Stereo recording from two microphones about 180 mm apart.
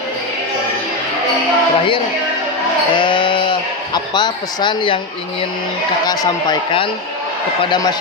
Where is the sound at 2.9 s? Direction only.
25° left (ahead or behind).